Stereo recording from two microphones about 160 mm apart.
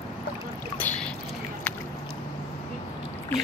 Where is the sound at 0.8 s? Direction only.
10° left (ahead or behind).